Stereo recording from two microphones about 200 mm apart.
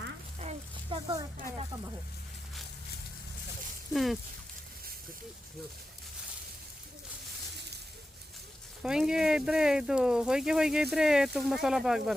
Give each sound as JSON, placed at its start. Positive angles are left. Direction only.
{"t": 0.3, "sound": "a sound", "side_deg": -30}
{"t": 3.9, "sound": "speech", "side_deg": 0}
{"t": 8.8, "sound": "speech", "side_deg": -5}